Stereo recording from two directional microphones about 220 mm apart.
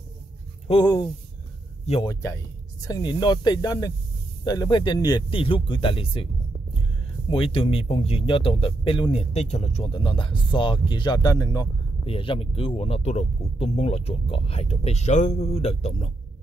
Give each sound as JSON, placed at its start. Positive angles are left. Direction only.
{"t": 0.7, "sound": "speech", "side_deg": 20}
{"t": 7.2, "sound": "speech", "side_deg": 25}
{"t": 12.1, "sound": "speech", "side_deg": 25}